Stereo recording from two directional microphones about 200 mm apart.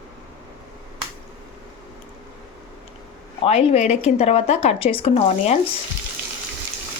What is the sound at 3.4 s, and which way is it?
Speech, 30° left (ahead or behind).